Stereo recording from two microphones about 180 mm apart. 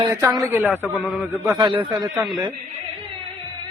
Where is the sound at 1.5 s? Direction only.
25° right (ahead or behind).